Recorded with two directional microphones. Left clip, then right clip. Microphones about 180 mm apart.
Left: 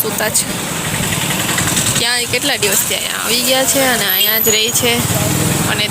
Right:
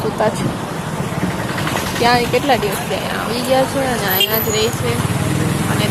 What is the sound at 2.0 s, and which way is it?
Speech, centre (ahead or behind).